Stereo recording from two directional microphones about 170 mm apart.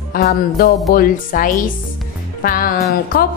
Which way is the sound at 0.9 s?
55° left (ahead or behind).